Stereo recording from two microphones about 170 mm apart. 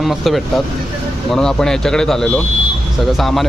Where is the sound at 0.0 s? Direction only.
Centre (ahead or behind).